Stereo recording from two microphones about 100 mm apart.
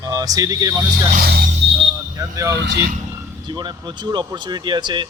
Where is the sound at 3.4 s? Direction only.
45° right (ahead or behind).